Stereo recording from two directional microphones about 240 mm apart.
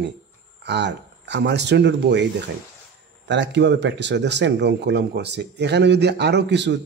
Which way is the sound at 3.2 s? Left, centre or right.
Right.